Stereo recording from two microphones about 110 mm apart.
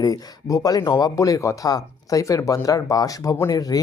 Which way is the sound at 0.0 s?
35° left (ahead or behind).